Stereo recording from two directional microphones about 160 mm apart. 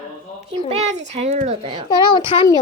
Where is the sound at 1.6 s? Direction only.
30° right (ahead or behind).